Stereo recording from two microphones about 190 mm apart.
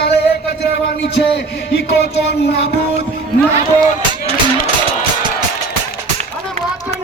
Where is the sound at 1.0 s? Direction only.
60° left (ahead or behind).